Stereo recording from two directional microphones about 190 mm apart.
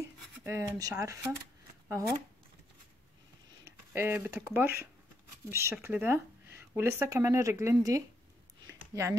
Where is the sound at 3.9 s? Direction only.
10° right (ahead or behind).